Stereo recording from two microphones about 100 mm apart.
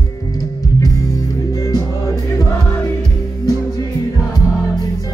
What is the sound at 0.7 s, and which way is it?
Music, 35° left (ahead or behind).